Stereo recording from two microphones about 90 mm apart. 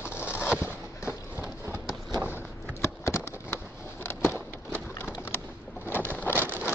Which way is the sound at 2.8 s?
30° left (ahead or behind).